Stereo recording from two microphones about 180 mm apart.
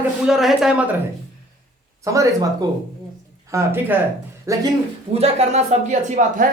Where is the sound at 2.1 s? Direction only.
20° right (ahead or behind).